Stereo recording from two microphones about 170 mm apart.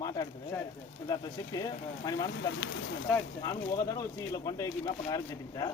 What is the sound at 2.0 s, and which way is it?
Speech, 20° left (ahead or behind).